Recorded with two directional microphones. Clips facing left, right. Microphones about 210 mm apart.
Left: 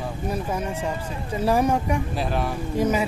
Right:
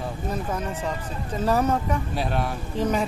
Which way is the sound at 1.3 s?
10° left (ahead or behind).